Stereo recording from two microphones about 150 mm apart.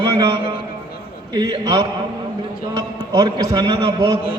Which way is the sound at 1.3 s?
25° right (ahead or behind).